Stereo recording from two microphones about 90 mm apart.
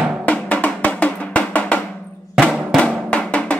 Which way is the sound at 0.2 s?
15° left (ahead or behind).